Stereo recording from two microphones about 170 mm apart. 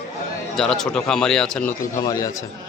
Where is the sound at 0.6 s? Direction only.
5° left (ahead or behind).